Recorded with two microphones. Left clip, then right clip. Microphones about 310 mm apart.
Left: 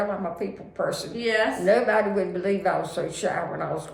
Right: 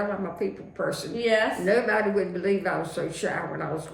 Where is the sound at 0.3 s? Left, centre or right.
Centre.